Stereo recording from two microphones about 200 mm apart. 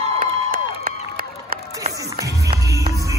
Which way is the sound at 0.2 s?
45° right (ahead or behind).